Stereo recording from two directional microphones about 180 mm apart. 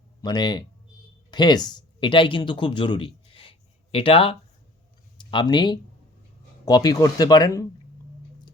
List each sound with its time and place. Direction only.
0.2 s speech: 25° left (ahead or behind)